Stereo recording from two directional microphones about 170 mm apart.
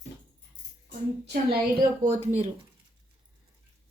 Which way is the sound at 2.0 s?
50° right (ahead or behind).